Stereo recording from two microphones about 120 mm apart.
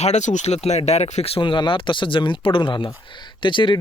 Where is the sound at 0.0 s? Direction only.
75° left (ahead or behind).